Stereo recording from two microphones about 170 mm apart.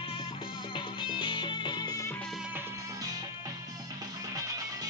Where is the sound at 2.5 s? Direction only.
15° right (ahead or behind).